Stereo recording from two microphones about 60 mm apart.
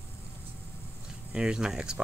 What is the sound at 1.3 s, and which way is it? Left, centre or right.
Speech, centre.